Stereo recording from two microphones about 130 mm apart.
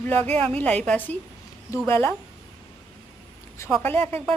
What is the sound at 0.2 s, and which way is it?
Speech, 50° right (ahead or behind).